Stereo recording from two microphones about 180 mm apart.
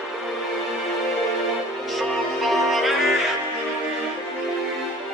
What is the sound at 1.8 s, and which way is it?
Music, centre (ahead or behind).